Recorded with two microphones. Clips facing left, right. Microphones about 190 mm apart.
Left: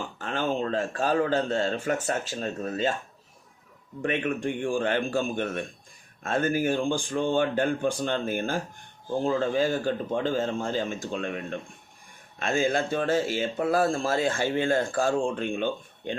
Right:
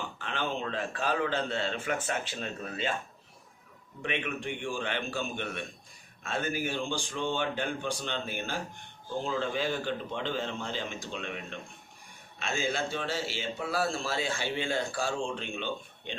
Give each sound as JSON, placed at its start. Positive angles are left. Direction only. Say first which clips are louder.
{"t": 0.2, "sound": "speech", "louder": "left 7 dB", "side_deg": 45}
{"t": 4.0, "sound": "speech", "louder": "left 7 dB", "side_deg": 45}
{"t": 12.4, "sound": "speech", "louder": "left 7 dB", "side_deg": 50}